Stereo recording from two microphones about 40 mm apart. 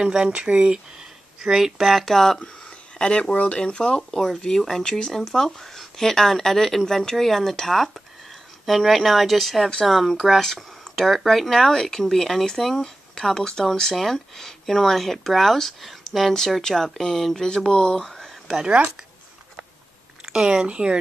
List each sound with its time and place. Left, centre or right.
0.0 s speech: centre
0.3 s speech: right
0.9 s a sound: centre
1.9 s speech: centre
2.3 s a sound: left
3.5 s speech: left; by 11.7 s centre
11.7 s speech: centre
17.6 s speech: centre
18.0 s a sound: centre
20.2 s speech: centre